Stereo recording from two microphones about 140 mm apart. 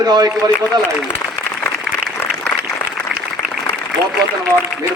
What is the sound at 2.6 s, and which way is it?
Applause, centre (ahead or behind).